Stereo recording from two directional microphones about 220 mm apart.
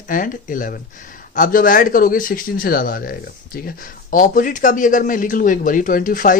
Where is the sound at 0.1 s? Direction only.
40° left (ahead or behind).